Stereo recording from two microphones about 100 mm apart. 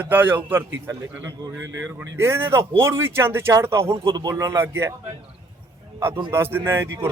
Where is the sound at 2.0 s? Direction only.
25° right (ahead or behind).